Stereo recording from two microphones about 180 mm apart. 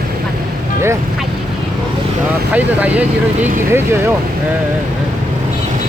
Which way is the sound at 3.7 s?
15° right (ahead or behind).